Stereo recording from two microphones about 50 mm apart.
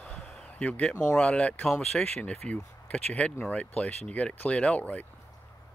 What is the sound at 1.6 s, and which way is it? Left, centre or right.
Speech, centre.